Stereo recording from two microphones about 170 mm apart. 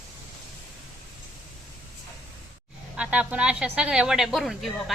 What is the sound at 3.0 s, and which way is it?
Speech, 10° right (ahead or behind).